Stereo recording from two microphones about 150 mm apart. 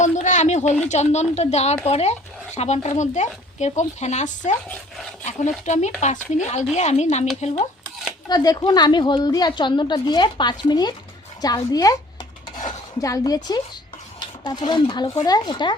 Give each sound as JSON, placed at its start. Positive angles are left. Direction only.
{"t": 0.0, "sound": "a sound", "side_deg": 55}
{"t": 0.9, "sound": "speech", "side_deg": 50}
{"t": 5.6, "sound": "speech", "side_deg": 50}
{"t": 8.3, "sound": "a woman's voice", "side_deg": 25}
{"t": 13.0, "sound": "a woman's voice", "side_deg": 25}